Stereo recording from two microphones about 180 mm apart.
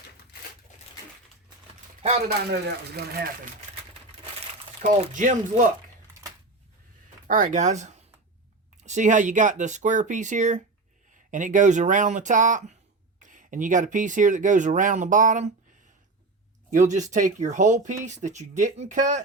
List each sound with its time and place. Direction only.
2.6 s speech: 60° right (ahead or behind)
4.8 s speech: 40° right (ahead or behind)
7.3 s speech: 45° right (ahead or behind)
16.7 s speech: 45° right (ahead or behind)